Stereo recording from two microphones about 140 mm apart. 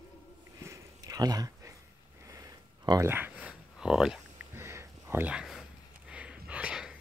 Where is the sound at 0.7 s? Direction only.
25° right (ahead or behind).